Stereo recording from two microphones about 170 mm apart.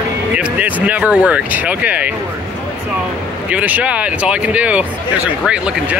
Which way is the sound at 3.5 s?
10° right (ahead or behind).